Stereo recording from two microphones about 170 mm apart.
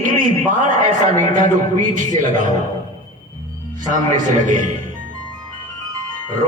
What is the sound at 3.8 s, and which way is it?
Speech, 50° right (ahead or behind).